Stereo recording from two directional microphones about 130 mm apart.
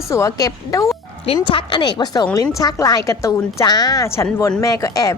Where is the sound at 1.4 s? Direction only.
40° left (ahead or behind).